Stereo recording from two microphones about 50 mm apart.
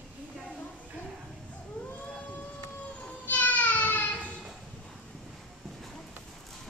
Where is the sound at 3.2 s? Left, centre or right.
Left.